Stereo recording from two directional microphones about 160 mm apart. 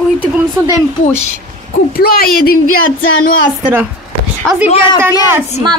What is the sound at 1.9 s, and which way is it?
Speech, 70° left (ahead or behind).